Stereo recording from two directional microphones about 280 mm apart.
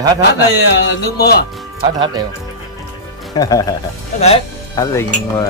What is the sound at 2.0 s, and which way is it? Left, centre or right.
Speech, centre.